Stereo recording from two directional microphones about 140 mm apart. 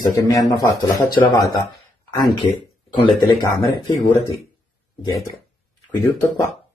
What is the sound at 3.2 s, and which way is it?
Speech, 30° left (ahead or behind).